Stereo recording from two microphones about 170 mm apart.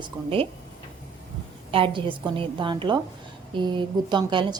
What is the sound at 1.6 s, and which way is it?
A woman's voice, 30° right (ahead or behind).